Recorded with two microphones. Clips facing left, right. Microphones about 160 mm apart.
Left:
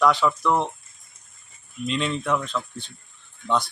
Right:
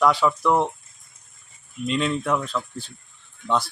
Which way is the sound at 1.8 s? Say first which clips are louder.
Right 2 dB; 5° right (ahead or behind).